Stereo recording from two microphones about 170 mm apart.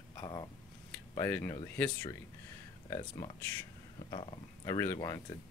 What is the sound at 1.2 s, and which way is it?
Speech, 15° left (ahead or behind).